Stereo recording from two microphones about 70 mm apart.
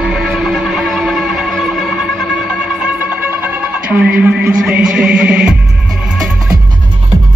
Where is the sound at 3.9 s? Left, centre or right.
Centre.